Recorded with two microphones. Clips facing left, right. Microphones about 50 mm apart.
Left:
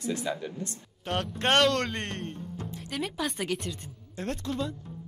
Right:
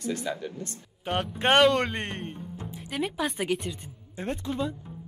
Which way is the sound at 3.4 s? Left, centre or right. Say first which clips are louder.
Right 3 dB; centre.